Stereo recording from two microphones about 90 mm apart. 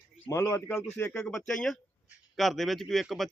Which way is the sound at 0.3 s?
35° left (ahead or behind).